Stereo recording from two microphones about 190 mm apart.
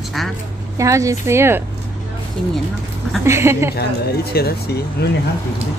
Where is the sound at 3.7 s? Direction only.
55° left (ahead or behind).